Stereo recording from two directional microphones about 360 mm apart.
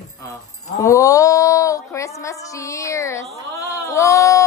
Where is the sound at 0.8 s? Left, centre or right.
Centre.